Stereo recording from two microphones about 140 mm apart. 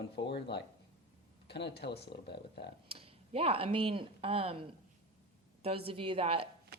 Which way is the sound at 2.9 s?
40° right (ahead or behind).